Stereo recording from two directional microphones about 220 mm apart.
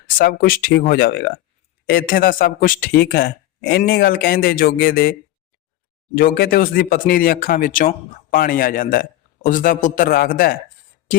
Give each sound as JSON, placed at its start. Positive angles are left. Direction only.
{"t": 0.2, "sound": "speech", "side_deg": 40}
{"t": 6.1, "sound": "speech", "side_deg": 40}